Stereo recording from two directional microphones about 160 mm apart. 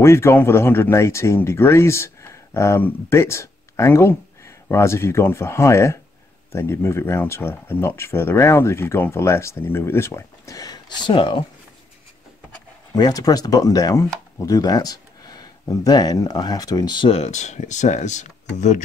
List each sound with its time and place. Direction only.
0.0 s speech: 15° left (ahead or behind); by 11.4 s 30° left (ahead or behind)
12.9 s speech: 25° left (ahead or behind); by 18.8 s 50° left (ahead or behind)